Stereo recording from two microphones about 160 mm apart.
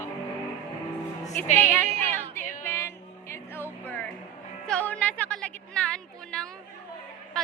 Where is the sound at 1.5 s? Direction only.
15° left (ahead or behind).